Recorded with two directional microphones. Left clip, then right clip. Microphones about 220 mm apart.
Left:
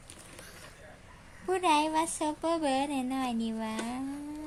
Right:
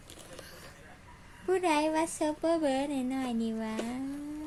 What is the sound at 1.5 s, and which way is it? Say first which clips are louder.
Speech: left 1 dB; 15° left (ahead or behind).